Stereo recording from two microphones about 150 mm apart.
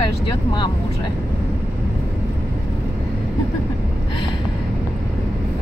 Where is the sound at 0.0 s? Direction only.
30° left (ahead or behind).